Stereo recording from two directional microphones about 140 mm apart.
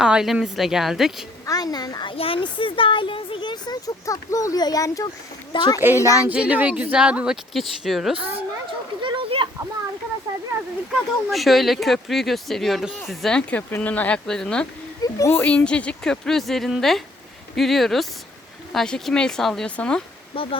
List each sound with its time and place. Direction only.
0.0 s speech: 5° right (ahead or behind)
1.5 s a child's voice: 25° left (ahead or behind)
5.8 s speech: 15° right (ahead or behind)
8.1 s speech: 40° right (ahead or behind)
9.0 s a sound: 35° right (ahead or behind)
11.3 s speech: centre (ahead or behind)
15.0 s speech: 20° left (ahead or behind)
20.3 s speech: 40° left (ahead or behind)